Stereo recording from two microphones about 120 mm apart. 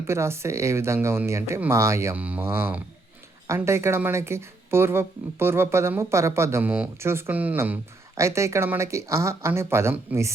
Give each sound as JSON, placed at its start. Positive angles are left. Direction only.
{"t": 0.1, "sound": "speech", "side_deg": -25}
{"t": 2.1, "sound": "speech", "side_deg": -15}